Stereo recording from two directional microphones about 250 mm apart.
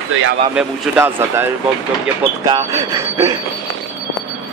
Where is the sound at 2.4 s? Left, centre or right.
Centre.